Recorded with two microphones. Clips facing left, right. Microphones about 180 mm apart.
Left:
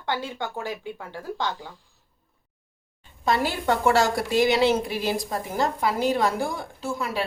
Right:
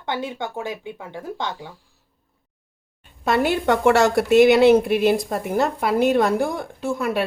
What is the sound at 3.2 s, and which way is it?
A woman's voice, 60° right (ahead or behind).